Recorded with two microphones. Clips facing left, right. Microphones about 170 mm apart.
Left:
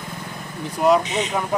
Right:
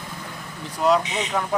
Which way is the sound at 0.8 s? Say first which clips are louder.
Left 3 dB; 10° left (ahead or behind).